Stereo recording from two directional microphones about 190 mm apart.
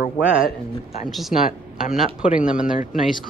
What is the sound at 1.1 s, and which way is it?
Speech, centre (ahead or behind).